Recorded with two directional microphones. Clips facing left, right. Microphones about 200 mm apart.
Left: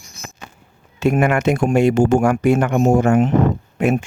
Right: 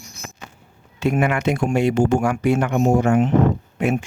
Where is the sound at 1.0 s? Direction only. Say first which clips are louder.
Left 3 dB; 45° left (ahead or behind).